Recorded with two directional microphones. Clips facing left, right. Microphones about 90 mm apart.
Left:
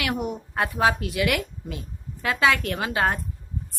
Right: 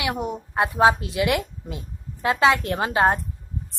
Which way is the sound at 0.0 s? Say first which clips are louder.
Right 1 dB; 25° right (ahead or behind).